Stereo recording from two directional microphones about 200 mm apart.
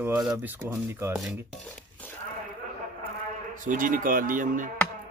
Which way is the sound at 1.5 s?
5° left (ahead or behind).